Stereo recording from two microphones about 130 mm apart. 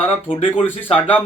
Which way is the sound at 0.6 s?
15° left (ahead or behind).